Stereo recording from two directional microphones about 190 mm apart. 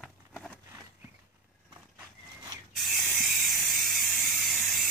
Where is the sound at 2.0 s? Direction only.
15° right (ahead or behind).